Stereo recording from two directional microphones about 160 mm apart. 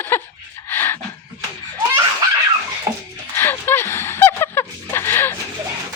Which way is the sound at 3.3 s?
15° left (ahead or behind).